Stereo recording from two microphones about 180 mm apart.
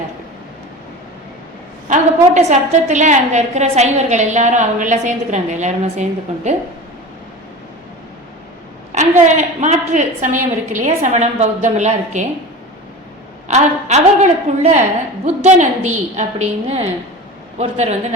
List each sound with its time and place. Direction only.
1.9 s a woman's voice: 40° right (ahead or behind)
9.2 s a woman's voice: 40° right (ahead or behind)
13.5 s a woman's voice: 40° right (ahead or behind)